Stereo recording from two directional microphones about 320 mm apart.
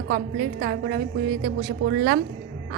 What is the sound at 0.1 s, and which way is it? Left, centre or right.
A woman's voice, right.